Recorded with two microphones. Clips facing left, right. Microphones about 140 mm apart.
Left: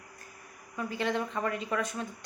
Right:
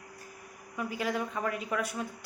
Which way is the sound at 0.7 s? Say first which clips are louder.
Left 1 dB; 10° right (ahead or behind).